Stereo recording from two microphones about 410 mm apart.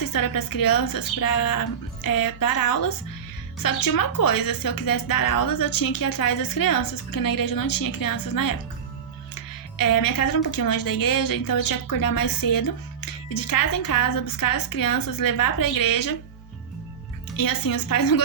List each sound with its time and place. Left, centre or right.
0.0 s a woman's voice: left
17.3 s a woman's voice: left